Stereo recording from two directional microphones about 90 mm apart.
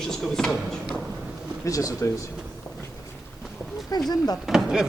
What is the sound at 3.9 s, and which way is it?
Speech, 45° left (ahead or behind).